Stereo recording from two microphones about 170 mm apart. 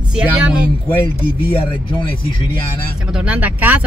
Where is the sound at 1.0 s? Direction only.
30° left (ahead or behind).